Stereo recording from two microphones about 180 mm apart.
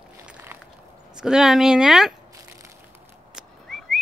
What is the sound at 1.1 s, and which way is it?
Speech, 5° right (ahead or behind).